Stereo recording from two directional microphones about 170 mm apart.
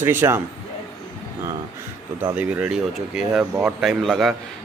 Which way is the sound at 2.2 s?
10° right (ahead or behind).